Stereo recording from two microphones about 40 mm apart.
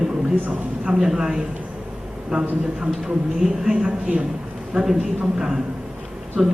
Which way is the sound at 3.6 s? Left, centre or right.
Centre.